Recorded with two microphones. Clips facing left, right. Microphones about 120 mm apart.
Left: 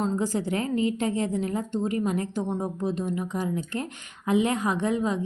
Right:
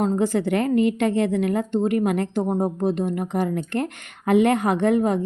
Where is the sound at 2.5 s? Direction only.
50° right (ahead or behind).